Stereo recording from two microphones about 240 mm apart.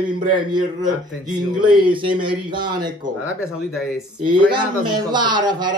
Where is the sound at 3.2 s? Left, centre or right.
Centre.